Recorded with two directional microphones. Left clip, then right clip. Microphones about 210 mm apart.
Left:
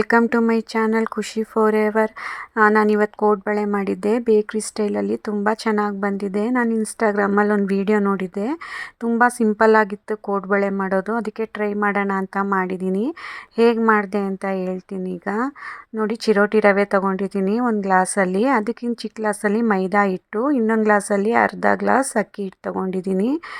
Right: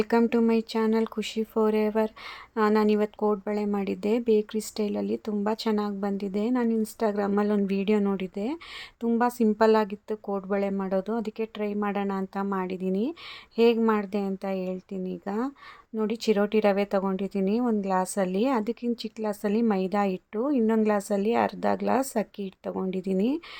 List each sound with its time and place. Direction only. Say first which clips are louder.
0.0 s a woman's voice: left 7 dB; 20° left (ahead or behind)